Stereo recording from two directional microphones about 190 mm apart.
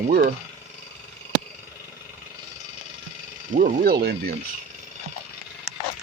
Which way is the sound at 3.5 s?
50° right (ahead or behind).